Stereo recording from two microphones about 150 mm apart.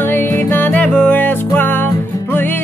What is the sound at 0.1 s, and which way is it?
Music, 15° left (ahead or behind).